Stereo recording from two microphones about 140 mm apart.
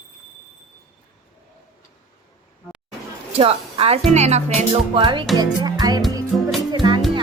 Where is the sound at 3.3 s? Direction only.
45° right (ahead or behind).